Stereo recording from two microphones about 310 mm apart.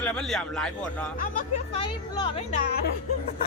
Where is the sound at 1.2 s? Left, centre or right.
Left.